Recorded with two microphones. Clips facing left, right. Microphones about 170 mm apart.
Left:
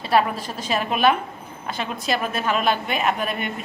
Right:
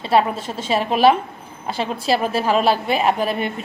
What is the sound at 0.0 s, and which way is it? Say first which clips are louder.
A woman's voice: right 2 dB; 25° right (ahead or behind).